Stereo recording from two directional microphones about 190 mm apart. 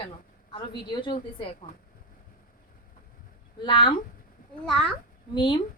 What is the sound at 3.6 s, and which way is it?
Speech, 25° left (ahead or behind).